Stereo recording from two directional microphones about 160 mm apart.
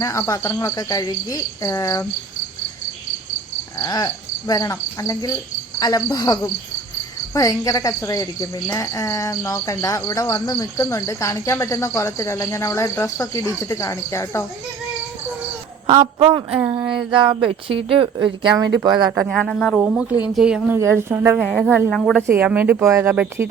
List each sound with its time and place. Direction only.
0.0 s speech: 20° left (ahead or behind)
3.8 s speech: 20° left (ahead or behind)
16.1 s speech: 35° right (ahead or behind)
19.3 s speech: centre (ahead or behind)
19.8 s speech: 10° right (ahead or behind)
20.7 s speech: 15° right (ahead or behind)
21.3 s speech: centre (ahead or behind)
22.3 s speech: 10° right (ahead or behind)